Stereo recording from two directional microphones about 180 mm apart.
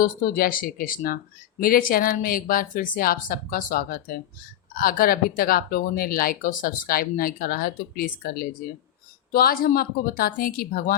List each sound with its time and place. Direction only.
0.0 s a woman's voice: 55° left (ahead or behind)